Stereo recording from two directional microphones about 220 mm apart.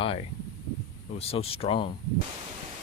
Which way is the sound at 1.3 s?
25° left (ahead or behind).